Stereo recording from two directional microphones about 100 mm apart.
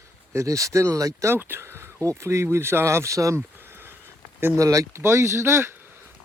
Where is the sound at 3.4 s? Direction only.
20° right (ahead or behind).